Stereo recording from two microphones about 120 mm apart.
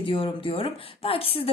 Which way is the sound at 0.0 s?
45° left (ahead or behind).